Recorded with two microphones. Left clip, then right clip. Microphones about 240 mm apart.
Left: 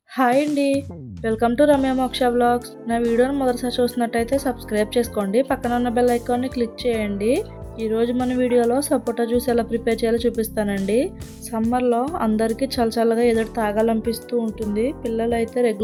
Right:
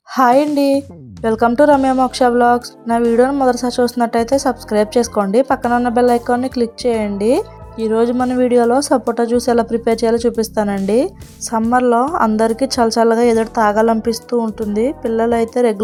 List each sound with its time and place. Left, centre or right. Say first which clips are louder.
0.2 s a woman's voice: right 6 dB; centre